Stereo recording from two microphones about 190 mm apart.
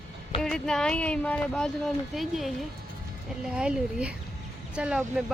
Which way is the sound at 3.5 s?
5° right (ahead or behind).